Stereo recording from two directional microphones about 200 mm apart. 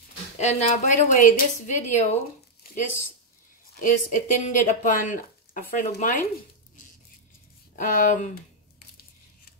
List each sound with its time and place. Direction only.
0.4 s speech: 35° left (ahead or behind)
3.8 s speech: 40° left (ahead or behind)
7.7 s speech: 40° left (ahead or behind)